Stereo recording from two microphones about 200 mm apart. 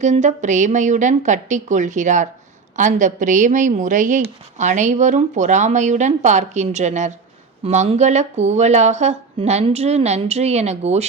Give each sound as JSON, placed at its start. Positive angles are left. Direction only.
{"t": 0.0, "sound": "speech", "side_deg": -35}